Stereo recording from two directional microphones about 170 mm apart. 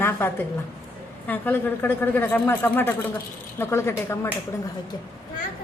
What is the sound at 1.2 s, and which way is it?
Speech, 10° left (ahead or behind).